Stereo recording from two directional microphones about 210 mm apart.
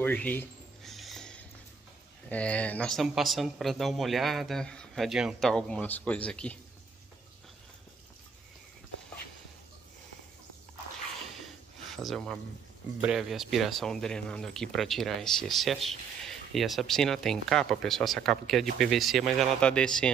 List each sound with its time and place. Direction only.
0.0 s a sound: 10° left (ahead or behind)
2.2 s speech: 5° left (ahead or behind)
11.9 s speech: centre (ahead or behind)